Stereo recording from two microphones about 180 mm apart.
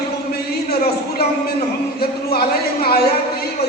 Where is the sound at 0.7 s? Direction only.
60° left (ahead or behind).